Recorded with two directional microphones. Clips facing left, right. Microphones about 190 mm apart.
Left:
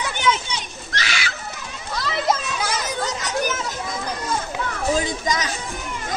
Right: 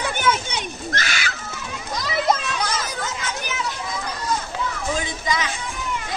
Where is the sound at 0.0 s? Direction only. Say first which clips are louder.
Even; 50° right (ahead or behind).